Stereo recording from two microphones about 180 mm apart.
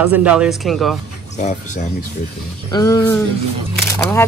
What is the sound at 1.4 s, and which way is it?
Speech, 40° left (ahead or behind).